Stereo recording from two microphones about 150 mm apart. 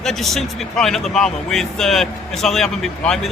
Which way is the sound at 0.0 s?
Centre (ahead or behind).